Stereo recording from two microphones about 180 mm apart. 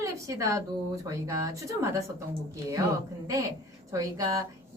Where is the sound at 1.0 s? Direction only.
20° right (ahead or behind).